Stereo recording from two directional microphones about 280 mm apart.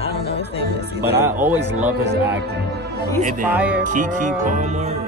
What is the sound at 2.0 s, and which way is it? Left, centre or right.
Speech, right.